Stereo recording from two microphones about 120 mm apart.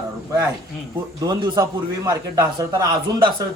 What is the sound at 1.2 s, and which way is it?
A man's voice, 35° right (ahead or behind).